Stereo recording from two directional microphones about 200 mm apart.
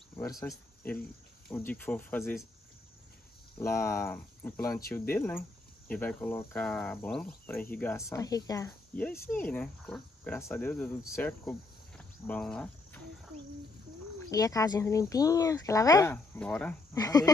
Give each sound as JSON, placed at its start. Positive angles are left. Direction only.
{"t": 0.1, "sound": "speech", "side_deg": 15}
{"t": 1.5, "sound": "cricket", "side_deg": 10}
{"t": 3.5, "sound": "cricket", "side_deg": 15}
{"t": 14.3, "sound": "cricket", "side_deg": 15}
{"t": 16.3, "sound": "speech", "side_deg": 5}
{"t": 16.9, "sound": "cricket", "side_deg": 20}